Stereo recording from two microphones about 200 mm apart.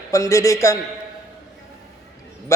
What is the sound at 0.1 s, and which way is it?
Speech, 15° left (ahead or behind).